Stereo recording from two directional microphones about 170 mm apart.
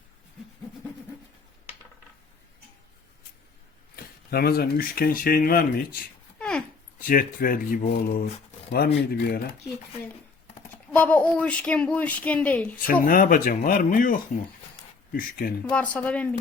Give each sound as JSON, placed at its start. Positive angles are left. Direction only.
{"t": 3.9, "sound": "speech", "side_deg": 65}
{"t": 8.7, "sound": "speech", "side_deg": 70}
{"t": 10.9, "sound": "speech", "side_deg": 10}
{"t": 12.9, "sound": "speech", "side_deg": 55}
{"t": 15.6, "sound": "speech", "side_deg": 10}